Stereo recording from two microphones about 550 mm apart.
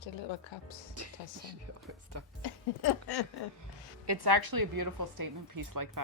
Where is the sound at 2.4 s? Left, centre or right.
Left.